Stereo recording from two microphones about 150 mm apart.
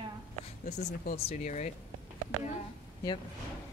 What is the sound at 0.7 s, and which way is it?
Speech, 50° left (ahead or behind).